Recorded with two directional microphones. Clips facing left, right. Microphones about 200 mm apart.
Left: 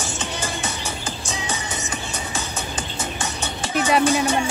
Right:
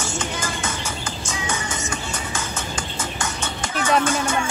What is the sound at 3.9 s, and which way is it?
Music, 15° left (ahead or behind).